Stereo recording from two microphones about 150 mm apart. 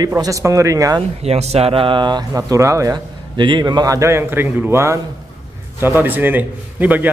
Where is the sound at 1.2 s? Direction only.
45° right (ahead or behind).